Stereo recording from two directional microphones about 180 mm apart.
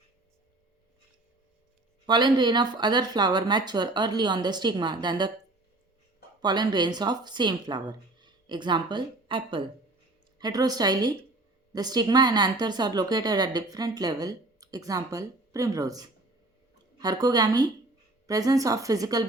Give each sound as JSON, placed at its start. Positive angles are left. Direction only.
{"t": 2.0, "sound": "a woman's voice", "side_deg": -25}
{"t": 6.4, "sound": "a woman's voice", "side_deg": -25}